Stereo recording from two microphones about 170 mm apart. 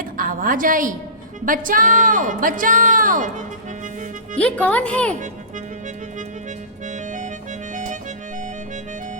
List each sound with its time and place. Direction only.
0.0 s a woman's voice: 55° right (ahead or behind)
4.4 s speech: 10° left (ahead or behind)
6.8 s music: 50° right (ahead or behind)
7.7 s accordion: 50° right (ahead or behind)